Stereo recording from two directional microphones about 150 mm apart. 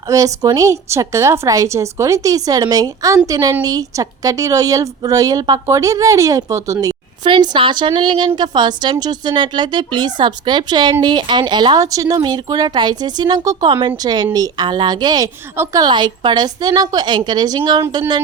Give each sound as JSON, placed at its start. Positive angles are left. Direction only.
{"t": 0.1, "sound": "a woman's voice", "side_deg": -20}
{"t": 7.3, "sound": "a woman's voice", "side_deg": -30}
{"t": 15.8, "sound": "a woman's voice", "side_deg": -30}